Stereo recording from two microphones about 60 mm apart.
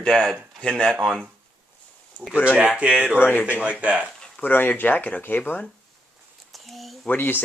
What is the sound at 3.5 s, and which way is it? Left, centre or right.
Speech, right.